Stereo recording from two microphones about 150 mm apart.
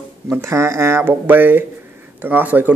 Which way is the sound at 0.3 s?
20° right (ahead or behind).